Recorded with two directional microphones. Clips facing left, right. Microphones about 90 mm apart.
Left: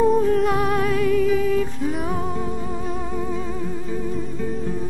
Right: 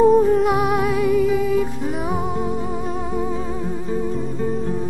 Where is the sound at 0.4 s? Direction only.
15° right (ahead or behind).